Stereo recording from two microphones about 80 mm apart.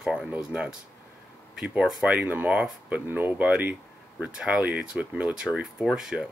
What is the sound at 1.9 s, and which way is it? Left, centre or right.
Speech, centre.